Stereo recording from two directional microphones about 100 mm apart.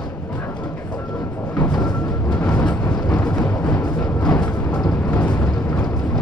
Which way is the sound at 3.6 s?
10° left (ahead or behind).